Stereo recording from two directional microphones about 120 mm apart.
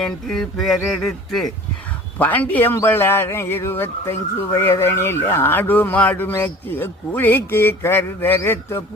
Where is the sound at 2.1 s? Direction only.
15° left (ahead or behind).